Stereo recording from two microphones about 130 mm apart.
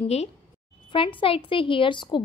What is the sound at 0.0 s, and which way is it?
Speech, 55° left (ahead or behind).